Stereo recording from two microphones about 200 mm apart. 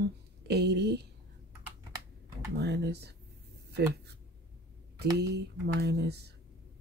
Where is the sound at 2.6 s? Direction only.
55° right (ahead or behind).